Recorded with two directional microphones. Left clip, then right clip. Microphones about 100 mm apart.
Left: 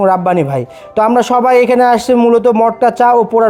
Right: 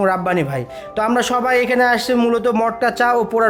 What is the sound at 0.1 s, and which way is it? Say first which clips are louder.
Speech: left 7 dB; 50° left (ahead or behind).